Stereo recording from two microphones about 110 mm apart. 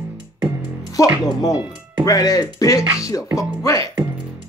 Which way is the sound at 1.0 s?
30° left (ahead or behind).